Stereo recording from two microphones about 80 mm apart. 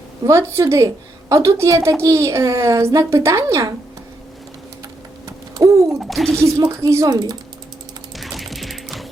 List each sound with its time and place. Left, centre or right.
0.3 s a woman's voice: right
5.5 s a sound: right
6.0 s speech: centre
6.3 s a woman's voice: right
7.1 s speech: right
8.1 s mechanisms: centre